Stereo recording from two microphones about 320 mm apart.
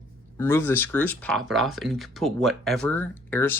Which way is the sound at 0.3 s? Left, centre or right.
Centre.